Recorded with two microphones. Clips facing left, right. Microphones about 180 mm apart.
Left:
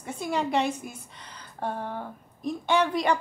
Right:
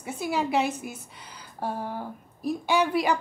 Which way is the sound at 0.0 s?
5° right (ahead or behind).